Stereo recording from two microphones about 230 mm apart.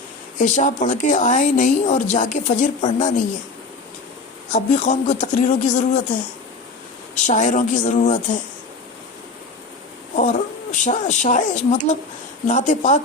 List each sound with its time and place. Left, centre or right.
0.3 s a woman's voice: left
4.5 s a woman's voice: left
7.2 s a woman's voice: left
10.2 s a woman's voice: left